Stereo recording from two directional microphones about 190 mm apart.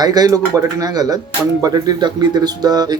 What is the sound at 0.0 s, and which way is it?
Speech, 20° right (ahead or behind).